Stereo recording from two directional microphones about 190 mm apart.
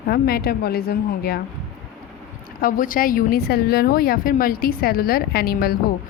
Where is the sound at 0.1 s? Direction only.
55° left (ahead or behind).